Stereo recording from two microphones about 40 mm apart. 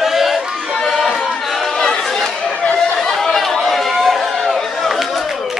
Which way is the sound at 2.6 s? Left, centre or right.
Left.